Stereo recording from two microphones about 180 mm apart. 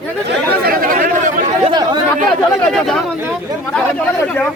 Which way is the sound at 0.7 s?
50° right (ahead or behind).